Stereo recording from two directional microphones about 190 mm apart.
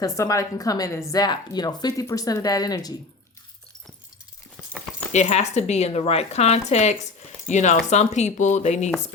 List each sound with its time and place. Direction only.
0.0 s speech: 15° left (ahead or behind)
5.1 s speech: 35° left (ahead or behind)